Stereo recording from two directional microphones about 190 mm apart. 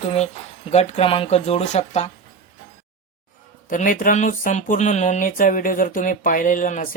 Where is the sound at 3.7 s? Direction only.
45° left (ahead or behind).